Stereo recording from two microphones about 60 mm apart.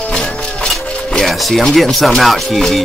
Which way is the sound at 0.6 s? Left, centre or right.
Centre.